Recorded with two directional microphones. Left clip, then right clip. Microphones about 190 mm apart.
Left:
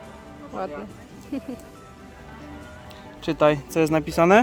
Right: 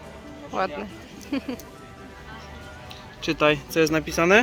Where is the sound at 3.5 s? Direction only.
50° left (ahead or behind).